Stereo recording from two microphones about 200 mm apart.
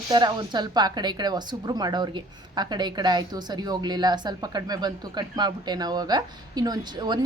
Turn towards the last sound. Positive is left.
turn(degrees=-20)  # may be behind; listen again after turning